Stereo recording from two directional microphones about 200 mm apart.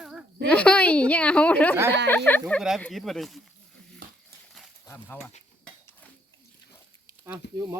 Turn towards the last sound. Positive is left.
turn(degrees=-15)  # may be behind; listen again after turning